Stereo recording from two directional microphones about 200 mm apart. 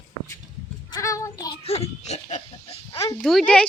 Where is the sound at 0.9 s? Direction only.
15° left (ahead or behind); by 2.8 s 35° left (ahead or behind).